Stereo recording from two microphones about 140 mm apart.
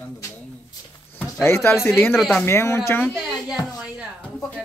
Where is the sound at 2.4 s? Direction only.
20° left (ahead or behind).